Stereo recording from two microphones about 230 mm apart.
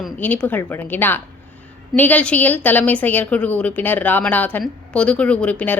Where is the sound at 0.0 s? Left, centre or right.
Centre.